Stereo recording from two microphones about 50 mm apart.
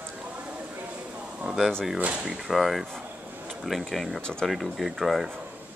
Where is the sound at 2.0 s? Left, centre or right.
Right.